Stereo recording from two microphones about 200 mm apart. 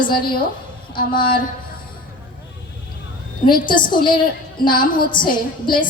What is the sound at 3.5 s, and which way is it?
Speech, 25° left (ahead or behind).